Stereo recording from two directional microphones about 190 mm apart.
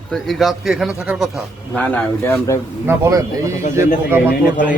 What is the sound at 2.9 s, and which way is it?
Speech, 15° right (ahead or behind).